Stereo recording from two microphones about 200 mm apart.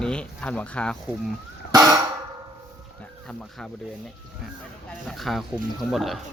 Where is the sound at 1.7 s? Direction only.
20° right (ahead or behind).